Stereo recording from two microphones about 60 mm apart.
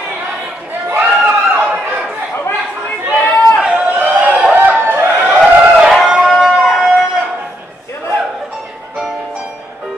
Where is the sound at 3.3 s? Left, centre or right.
Centre.